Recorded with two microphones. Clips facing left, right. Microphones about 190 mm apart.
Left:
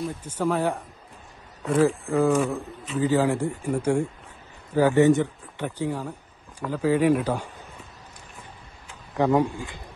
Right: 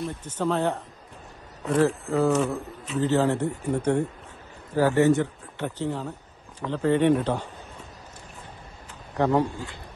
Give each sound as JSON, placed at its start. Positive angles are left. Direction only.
{"t": 0.0, "sound": "speech", "side_deg": 10}
{"t": 1.8, "sound": "speech", "side_deg": 10}
{"t": 9.2, "sound": "speech", "side_deg": 15}